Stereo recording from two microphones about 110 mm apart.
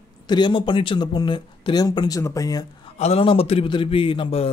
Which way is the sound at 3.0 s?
65° left (ahead or behind).